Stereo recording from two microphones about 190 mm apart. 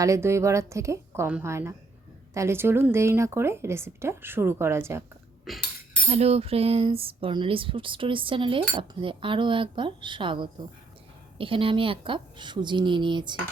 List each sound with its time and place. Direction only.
0.0 s a woman's voice: 15° right (ahead or behind)
5.5 s speech: centre (ahead or behind)
6.1 s speech: 35° right (ahead or behind)